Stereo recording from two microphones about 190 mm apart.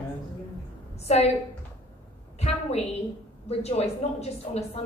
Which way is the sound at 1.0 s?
35° left (ahead or behind).